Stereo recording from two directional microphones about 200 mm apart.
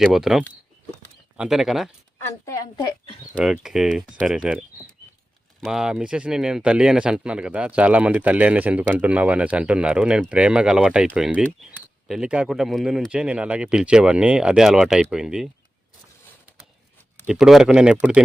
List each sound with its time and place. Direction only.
0.0 s speech: centre (ahead or behind)
2.4 s speech: 15° left (ahead or behind)
3.3 s speech: 5° right (ahead or behind)
17.2 s speech: centre (ahead or behind)